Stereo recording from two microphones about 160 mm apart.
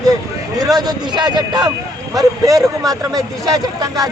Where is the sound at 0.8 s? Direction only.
25° right (ahead or behind).